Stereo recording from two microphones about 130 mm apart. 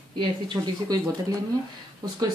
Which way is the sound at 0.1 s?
35° right (ahead or behind).